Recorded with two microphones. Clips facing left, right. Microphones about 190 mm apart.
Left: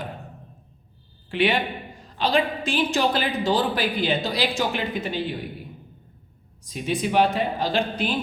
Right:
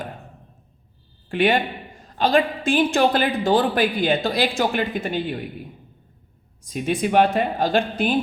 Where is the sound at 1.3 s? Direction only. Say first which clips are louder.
Right 3 dB; 50° right (ahead or behind).